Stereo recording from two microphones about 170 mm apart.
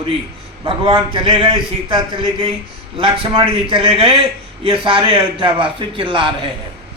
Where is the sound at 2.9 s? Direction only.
30° right (ahead or behind).